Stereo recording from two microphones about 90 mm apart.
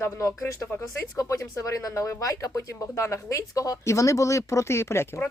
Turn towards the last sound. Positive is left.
turn(degrees=30)  # may be behind; listen again after turning